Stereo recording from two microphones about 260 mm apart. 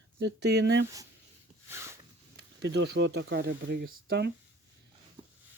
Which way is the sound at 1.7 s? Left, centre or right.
Centre.